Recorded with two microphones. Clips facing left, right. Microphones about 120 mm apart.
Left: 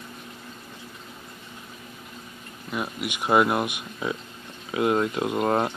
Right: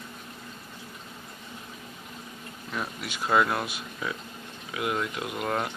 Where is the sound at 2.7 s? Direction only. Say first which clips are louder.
Left 4 dB; 10° left (ahead or behind); by 5.7 s 30° left (ahead or behind).